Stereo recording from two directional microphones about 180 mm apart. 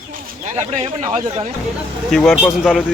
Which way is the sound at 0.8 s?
30° right (ahead or behind).